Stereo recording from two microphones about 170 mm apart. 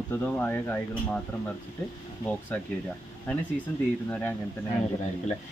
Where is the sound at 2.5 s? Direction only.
10° left (ahead or behind).